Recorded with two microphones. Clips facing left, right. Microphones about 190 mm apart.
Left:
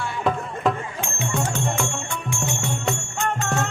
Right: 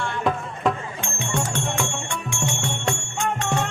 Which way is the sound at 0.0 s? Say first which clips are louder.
Even; 5° left (ahead or behind).